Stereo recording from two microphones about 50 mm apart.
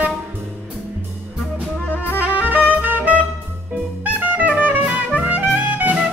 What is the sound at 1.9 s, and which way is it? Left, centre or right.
Music, left.